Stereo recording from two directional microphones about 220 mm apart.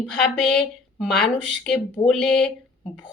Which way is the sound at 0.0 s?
5° left (ahead or behind).